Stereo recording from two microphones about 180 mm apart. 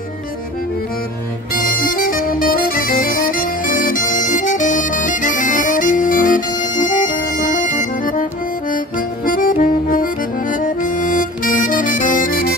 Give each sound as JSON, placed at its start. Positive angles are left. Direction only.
{"t": 1.5, "sound": "music", "side_deg": 50}